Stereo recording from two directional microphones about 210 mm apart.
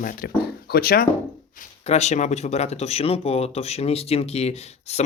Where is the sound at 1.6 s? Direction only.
30° left (ahead or behind).